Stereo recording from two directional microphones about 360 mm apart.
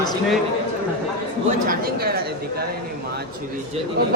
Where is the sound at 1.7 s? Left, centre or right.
Right.